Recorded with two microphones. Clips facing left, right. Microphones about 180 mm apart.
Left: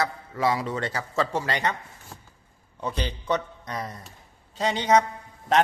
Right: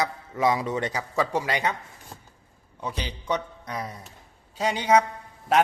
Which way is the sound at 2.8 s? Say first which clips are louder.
Left 3 dB; 10° right (ahead or behind).